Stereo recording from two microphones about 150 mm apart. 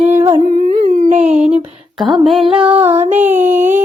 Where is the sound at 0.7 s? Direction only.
55° right (ahead or behind).